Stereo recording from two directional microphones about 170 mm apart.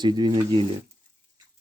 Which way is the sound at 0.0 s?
25° right (ahead or behind).